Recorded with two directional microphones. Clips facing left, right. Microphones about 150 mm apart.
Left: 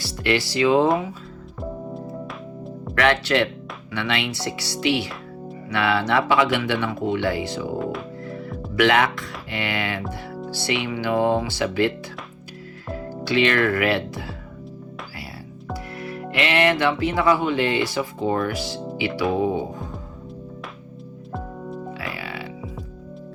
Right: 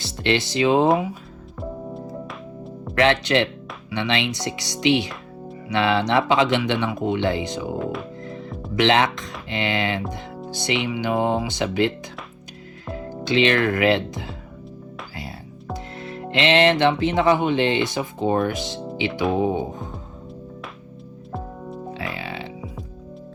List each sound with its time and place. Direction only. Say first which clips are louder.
0.0 s speech: even; 25° right (ahead or behind)
2.9 s speech: right 1 dB; 20° right (ahead or behind)
8.2 s music: left 1 dB; 20° right (ahead or behind)
8.7 s speech: even; 25° right (ahead or behind)
9.5 s music: right 3 dB; 20° right (ahead or behind)
10.1 s speech: left 1 dB; 20° right (ahead or behind)
15.7 s speech: left 1 dB; 25° right (ahead or behind)
18.9 s music: even; 20° right (ahead or behind)
19.4 s speech: right 1 dB; 20° right (ahead or behind)
21.9 s music: right 1 dB; 25° right (ahead or behind)